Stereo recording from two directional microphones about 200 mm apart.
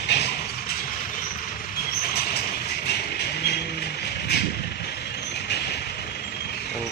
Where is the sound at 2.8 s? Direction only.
55° left (ahead or behind).